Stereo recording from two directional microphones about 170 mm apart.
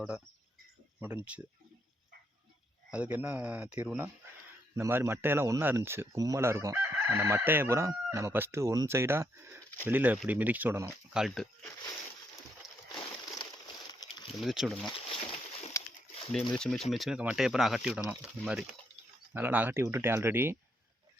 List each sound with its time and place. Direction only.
1.0 s speech: 10° right (ahead or behind)
2.9 s speech: 10° right (ahead or behind)
11.1 s speech: centre (ahead or behind)
12.9 s a sound: 25° left (ahead or behind)
14.4 s speech: centre (ahead or behind)
14.8 s a sound: 30° left (ahead or behind)
16.3 s speech: 5° left (ahead or behind); by 20.6 s 15° right (ahead or behind)